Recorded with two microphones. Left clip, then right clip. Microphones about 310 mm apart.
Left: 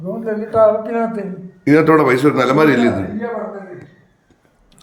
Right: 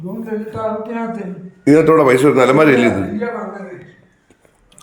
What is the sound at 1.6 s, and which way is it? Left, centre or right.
Speech, centre.